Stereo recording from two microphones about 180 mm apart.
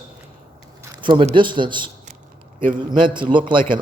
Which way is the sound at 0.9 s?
25° right (ahead or behind).